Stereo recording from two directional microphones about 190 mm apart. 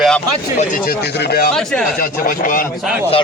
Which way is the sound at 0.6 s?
45° left (ahead or behind).